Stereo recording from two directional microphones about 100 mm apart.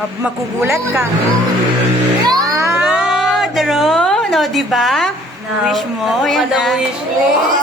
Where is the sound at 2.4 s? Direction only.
30° right (ahead or behind).